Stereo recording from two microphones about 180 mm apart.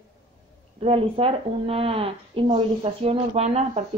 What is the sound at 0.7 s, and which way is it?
A woman's voice, 30° right (ahead or behind).